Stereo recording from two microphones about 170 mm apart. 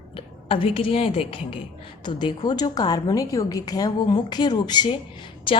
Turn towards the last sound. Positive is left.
turn(degrees=30)  # may be behind; listen again after turning